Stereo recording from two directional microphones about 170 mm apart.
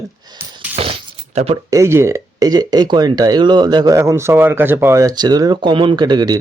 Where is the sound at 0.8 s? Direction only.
35° right (ahead or behind).